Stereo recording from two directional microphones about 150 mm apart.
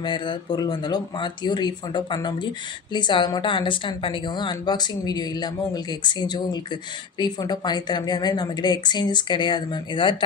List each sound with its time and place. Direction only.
0.0 s a woman's voice: 30° left (ahead or behind)